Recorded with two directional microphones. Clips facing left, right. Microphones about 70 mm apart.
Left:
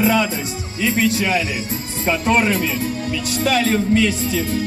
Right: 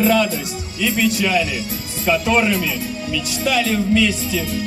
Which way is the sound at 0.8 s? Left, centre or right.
Left.